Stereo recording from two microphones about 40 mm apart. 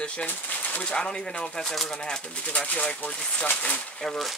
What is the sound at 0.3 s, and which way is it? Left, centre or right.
Speech, left.